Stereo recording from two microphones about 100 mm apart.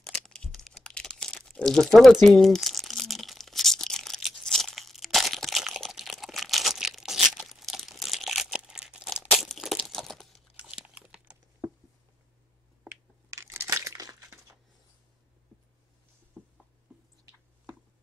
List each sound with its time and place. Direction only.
0.0 s crumpling: 5° left (ahead or behind)
10.5 s chewing: 10° right (ahead or behind)
12.8 s crushing: 30° right (ahead or behind)
16.4 s a sound: 10° left (ahead or behind)